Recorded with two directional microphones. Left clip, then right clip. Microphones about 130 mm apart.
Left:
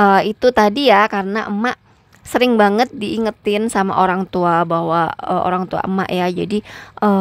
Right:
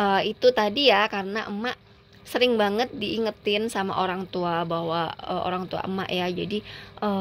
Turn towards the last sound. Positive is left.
turn(degrees=50)  # may be behind; listen again after turning